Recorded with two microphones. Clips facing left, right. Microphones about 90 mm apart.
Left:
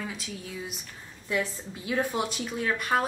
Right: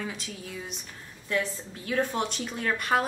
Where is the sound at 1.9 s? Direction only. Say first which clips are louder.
Even; 5° left (ahead or behind).